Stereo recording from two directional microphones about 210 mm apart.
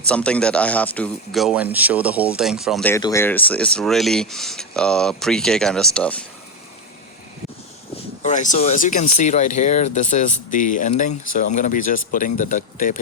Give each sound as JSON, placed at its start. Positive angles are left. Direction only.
{"t": 0.0, "sound": "speech", "side_deg": 5}
{"t": 2.8, "sound": "speech", "side_deg": 15}
{"t": 8.2, "sound": "speech", "side_deg": 35}